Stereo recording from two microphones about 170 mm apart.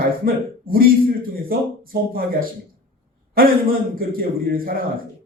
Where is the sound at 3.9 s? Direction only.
60° right (ahead or behind).